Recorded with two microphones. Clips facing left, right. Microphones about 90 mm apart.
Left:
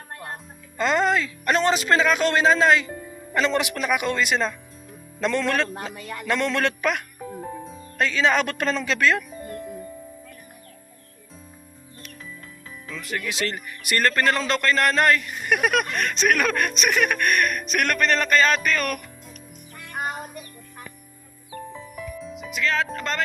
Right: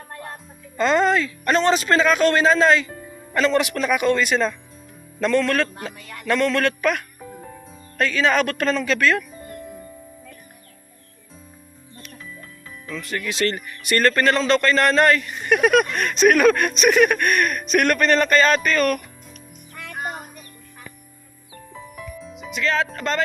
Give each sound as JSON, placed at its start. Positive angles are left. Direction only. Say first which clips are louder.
{"t": 0.8, "sound": "speech", "louder": "right 3 dB", "side_deg": 10}
{"t": 13.0, "sound": "speech", "louder": "right 4 dB", "side_deg": 10}
{"t": 22.2, "sound": "speech", "louder": "right 2 dB", "side_deg": 0}